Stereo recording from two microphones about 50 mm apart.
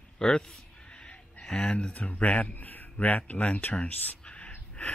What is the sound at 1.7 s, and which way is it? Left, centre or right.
Speech, left.